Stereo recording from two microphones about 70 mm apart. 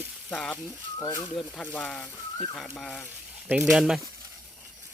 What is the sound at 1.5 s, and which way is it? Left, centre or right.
Speech, centre.